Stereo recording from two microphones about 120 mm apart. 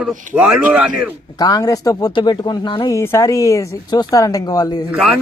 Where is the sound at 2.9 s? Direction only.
25° left (ahead or behind).